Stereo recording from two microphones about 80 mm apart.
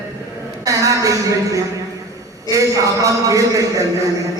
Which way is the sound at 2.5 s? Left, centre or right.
Right.